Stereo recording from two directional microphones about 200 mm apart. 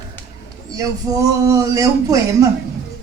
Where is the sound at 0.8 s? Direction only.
20° right (ahead or behind).